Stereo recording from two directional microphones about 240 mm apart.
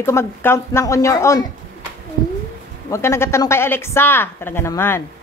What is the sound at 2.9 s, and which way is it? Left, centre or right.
Speech, centre.